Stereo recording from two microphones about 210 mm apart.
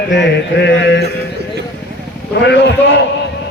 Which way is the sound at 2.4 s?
55° left (ahead or behind).